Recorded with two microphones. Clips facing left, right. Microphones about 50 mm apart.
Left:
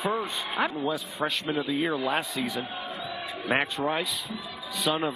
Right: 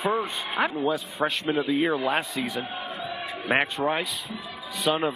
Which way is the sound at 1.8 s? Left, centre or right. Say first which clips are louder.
Right 3 dB; centre.